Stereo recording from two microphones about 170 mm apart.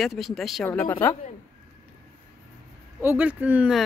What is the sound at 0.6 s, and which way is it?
Speech, 10° left (ahead or behind).